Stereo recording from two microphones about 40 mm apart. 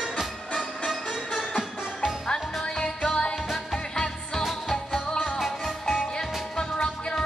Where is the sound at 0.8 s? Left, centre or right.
Centre.